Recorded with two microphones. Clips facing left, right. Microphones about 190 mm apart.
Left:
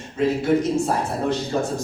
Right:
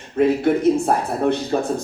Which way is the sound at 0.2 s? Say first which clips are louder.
Right 3 dB; 60° right (ahead or behind).